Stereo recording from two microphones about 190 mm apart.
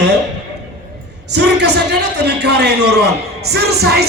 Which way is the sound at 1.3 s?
65° right (ahead or behind).